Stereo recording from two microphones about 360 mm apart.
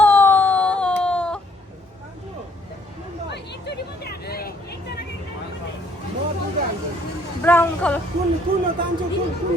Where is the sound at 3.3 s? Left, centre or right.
Left.